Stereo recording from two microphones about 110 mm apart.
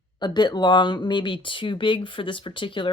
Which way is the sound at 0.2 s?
40° left (ahead or behind).